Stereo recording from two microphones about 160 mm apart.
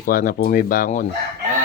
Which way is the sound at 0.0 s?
60° left (ahead or behind).